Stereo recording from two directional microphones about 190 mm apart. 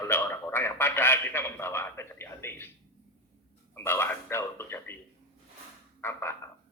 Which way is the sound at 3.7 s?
10° left (ahead or behind).